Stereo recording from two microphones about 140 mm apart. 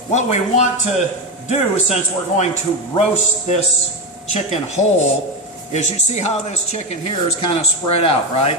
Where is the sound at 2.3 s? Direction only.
55° left (ahead or behind).